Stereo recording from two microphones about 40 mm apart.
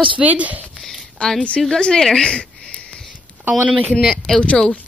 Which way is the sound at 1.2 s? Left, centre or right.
Left.